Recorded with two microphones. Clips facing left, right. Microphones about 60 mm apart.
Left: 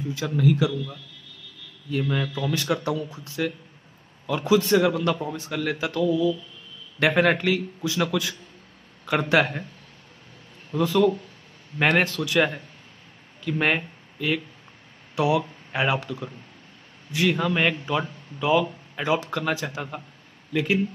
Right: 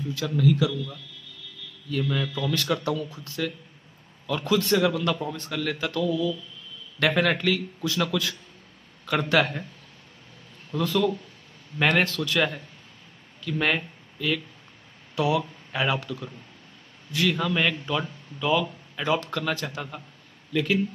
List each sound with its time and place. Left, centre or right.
0.3 s speech: left; by 5.9 s centre
5.9 s speech: left
10.7 s speech: left